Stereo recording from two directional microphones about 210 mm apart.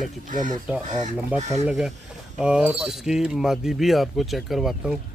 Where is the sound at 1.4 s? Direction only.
30° right (ahead or behind).